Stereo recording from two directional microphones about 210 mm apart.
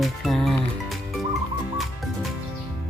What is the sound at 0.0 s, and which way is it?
Music, centre (ahead or behind).